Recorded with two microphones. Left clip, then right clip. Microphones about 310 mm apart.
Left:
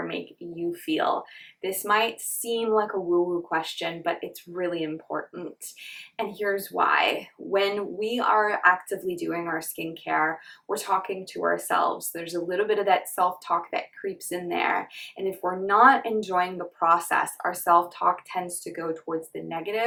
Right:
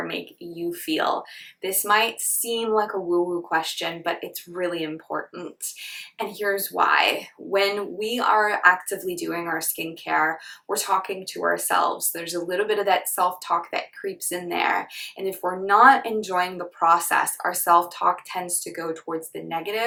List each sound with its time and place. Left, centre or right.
0.0 s speech: centre
2.9 s speech: centre
3.5 s speech: centre